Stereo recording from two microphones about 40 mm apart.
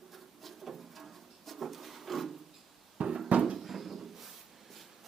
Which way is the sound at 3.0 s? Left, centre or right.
Right.